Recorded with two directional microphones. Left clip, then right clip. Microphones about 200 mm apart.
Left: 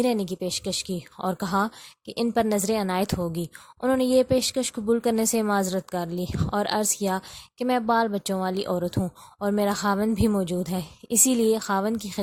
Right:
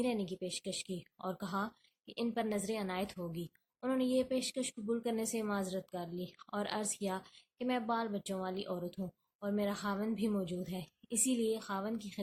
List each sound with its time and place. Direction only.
0.0 s speech: 50° left (ahead or behind)